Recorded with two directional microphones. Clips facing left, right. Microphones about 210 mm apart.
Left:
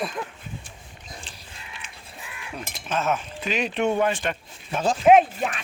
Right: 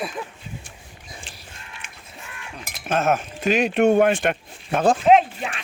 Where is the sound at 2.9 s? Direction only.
55° right (ahead or behind).